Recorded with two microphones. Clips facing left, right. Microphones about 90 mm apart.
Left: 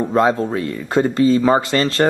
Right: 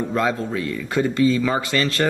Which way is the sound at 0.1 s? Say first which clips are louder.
Left 8 dB; 35° left (ahead or behind).